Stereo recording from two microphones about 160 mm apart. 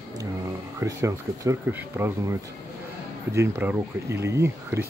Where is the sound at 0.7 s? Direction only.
20° right (ahead or behind).